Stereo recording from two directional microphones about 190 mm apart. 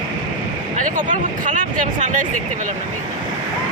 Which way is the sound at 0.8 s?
45° right (ahead or behind).